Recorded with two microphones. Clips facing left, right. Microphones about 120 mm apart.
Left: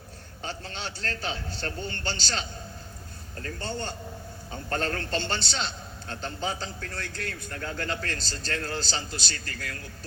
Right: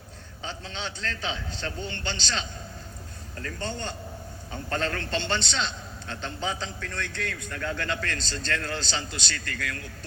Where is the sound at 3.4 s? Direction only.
35° left (ahead or behind).